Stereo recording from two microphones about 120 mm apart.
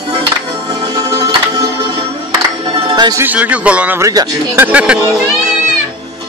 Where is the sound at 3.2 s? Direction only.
10° right (ahead or behind).